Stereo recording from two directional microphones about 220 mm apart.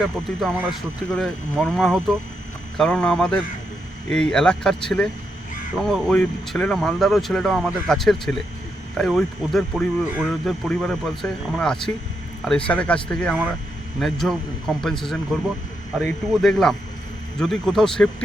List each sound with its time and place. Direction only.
1.1 s speech: 5° left (ahead or behind)